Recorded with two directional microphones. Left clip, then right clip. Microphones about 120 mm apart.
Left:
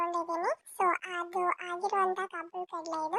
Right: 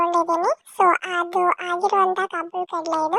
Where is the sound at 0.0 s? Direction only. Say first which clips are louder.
Right 12 dB; 65° right (ahead or behind).